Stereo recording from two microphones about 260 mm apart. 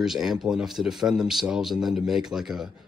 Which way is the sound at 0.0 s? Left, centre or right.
Centre.